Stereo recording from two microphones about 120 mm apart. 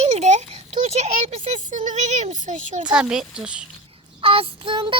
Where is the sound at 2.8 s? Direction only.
5° right (ahead or behind).